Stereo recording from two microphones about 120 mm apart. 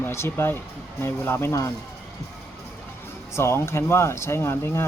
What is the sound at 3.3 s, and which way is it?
Speech, 20° left (ahead or behind).